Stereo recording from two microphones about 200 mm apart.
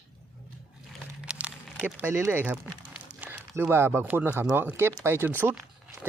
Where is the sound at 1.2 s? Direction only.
5° right (ahead or behind).